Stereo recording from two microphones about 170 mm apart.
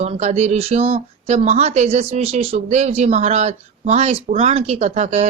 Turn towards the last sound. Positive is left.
turn(degrees=-40)  # may be behind; listen again after turning